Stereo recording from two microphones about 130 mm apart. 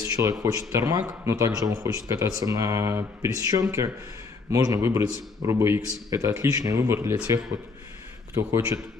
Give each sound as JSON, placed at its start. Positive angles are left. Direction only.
{"t": 0.2, "sound": "speech", "side_deg": -25}
{"t": 8.4, "sound": "speech", "side_deg": -20}